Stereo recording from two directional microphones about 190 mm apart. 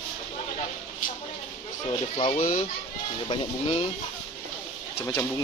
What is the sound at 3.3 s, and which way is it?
Speech, 30° left (ahead or behind).